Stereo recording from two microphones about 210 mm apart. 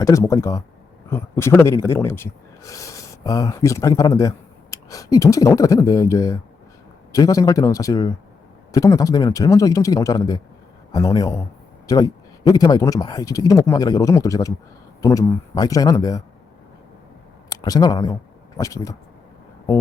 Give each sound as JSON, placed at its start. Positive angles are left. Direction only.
{"t": 0.0, "sound": "speech", "side_deg": 15}
{"t": 17.5, "sound": "speech", "side_deg": 15}